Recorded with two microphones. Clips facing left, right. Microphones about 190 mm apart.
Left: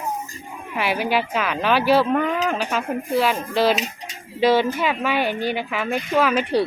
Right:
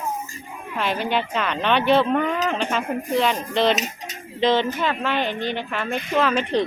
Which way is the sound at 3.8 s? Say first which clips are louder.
Even; 45° right (ahead or behind).